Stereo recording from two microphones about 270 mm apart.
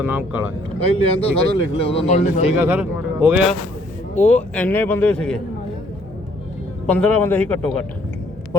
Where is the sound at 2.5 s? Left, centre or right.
Centre.